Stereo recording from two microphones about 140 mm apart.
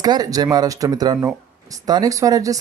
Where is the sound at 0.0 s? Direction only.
30° right (ahead or behind).